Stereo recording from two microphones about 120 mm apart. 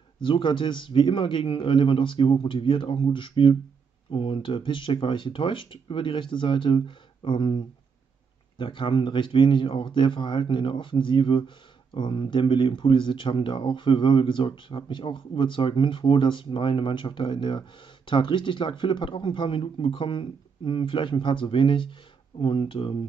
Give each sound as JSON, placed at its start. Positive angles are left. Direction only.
{"t": 0.2, "sound": "a man's voice", "side_deg": 40}